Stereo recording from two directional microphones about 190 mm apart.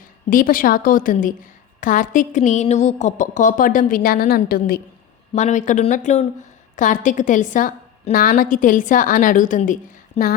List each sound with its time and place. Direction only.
0.3 s a woman's voice: 45° left (ahead or behind)
5.3 s a woman's voice: 40° left (ahead or behind)
10.2 s speech: 35° left (ahead or behind)